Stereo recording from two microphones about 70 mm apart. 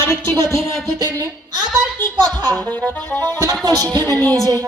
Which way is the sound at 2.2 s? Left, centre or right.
Right.